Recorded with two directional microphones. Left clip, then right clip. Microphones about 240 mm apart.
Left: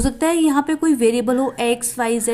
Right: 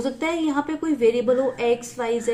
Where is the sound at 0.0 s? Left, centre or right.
Left.